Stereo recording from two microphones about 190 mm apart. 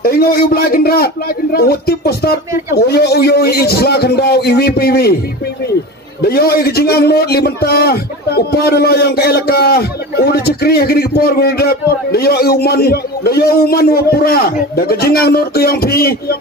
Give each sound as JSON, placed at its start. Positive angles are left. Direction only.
{"t": 0.0, "sound": "a man's voice", "side_deg": 50}
{"t": 6.2, "sound": "a man's voice", "side_deg": 55}